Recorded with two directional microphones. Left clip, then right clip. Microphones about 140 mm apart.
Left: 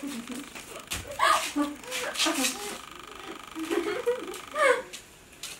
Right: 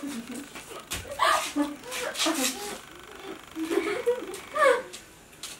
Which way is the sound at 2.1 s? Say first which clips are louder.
Even; centre (ahead or behind).